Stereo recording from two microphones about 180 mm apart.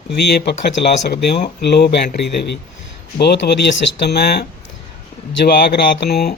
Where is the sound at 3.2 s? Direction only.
65° left (ahead or behind).